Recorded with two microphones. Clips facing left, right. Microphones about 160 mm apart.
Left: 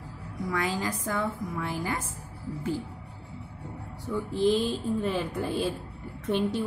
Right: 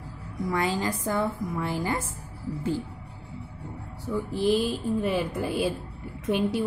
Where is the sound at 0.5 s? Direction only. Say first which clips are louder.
Right 3 dB; 30° right (ahead or behind).